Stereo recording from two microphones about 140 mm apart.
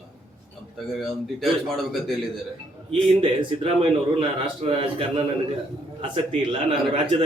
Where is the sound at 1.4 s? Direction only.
Centre (ahead or behind).